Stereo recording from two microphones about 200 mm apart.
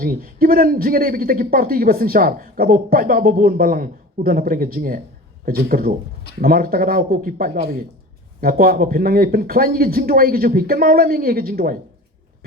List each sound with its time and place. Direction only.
0.0 s a man's voice: 50° right (ahead or behind)